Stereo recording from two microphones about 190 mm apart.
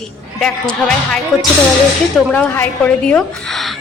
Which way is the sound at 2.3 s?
5° left (ahead or behind).